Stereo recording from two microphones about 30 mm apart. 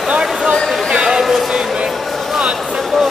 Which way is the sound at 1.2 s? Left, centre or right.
Centre.